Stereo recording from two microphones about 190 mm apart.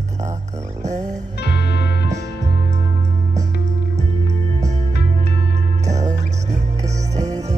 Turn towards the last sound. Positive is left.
turn(degrees=-35)  # may be behind; listen again after turning